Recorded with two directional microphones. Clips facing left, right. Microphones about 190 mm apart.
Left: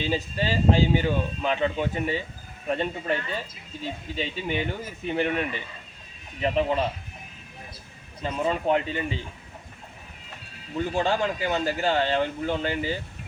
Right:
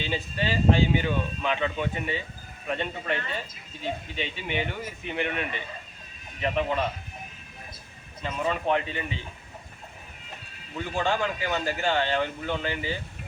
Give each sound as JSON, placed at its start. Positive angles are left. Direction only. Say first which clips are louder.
{"t": 0.0, "sound": "speech", "louder": "left 3 dB", "side_deg": 35}
{"t": 6.4, "sound": "speech", "louder": "left 3 dB", "side_deg": 30}
{"t": 8.2, "sound": "speech", "louder": "left 2 dB", "side_deg": 35}
{"t": 10.8, "sound": "speech", "louder": "left 3 dB", "side_deg": 35}